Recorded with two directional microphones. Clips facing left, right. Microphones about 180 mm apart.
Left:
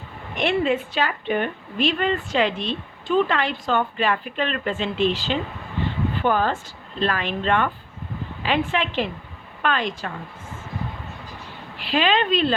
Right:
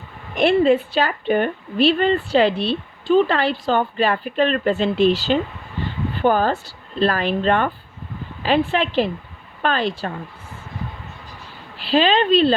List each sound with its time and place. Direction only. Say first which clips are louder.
0.3 s a woman's voice: right 6 dB; 35° right (ahead or behind)
11.8 s a woman's voice: right 4 dB; 30° right (ahead or behind)